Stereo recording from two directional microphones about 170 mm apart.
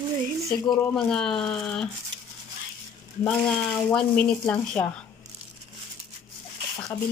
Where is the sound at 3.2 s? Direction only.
5° left (ahead or behind).